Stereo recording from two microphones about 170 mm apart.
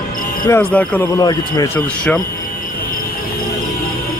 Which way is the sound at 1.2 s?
20° left (ahead or behind).